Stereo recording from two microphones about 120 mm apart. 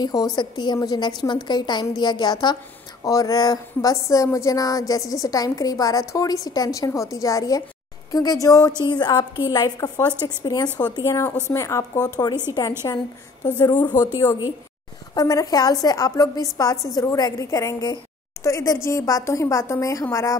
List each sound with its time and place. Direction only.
0.0 s a woman's voice: 30° left (ahead or behind)